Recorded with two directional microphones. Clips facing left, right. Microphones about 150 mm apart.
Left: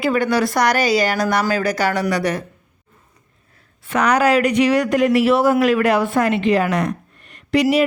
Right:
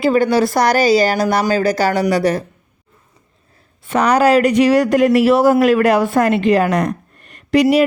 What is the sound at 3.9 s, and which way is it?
Speech, 30° right (ahead or behind).